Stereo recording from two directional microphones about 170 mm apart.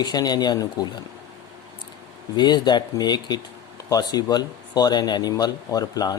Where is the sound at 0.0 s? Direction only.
25° left (ahead or behind).